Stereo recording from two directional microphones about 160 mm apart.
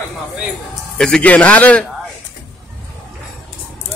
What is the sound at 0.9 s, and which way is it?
Speech, 5° left (ahead or behind).